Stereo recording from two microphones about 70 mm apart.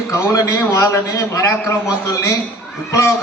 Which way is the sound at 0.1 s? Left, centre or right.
Left.